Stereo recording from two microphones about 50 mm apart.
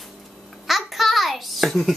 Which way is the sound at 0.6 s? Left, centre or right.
Centre.